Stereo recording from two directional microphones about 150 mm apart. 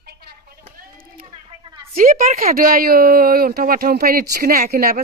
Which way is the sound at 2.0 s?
70° right (ahead or behind).